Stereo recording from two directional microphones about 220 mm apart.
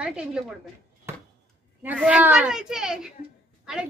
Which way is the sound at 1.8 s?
5° right (ahead or behind).